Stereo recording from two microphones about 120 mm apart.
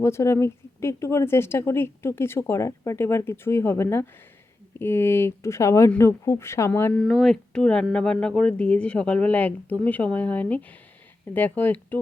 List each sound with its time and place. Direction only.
0.0 s speech: 25° left (ahead or behind)
6.9 s speech: centre (ahead or behind)